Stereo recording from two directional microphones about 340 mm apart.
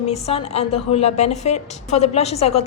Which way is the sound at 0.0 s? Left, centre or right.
Centre.